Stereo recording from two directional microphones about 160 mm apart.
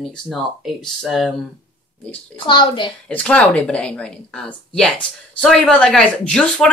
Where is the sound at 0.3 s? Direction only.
Centre (ahead or behind).